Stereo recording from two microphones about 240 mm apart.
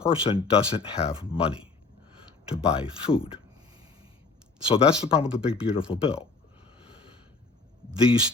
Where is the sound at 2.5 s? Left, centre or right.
Centre.